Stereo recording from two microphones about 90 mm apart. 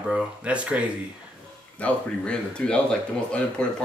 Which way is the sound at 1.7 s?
15° left (ahead or behind).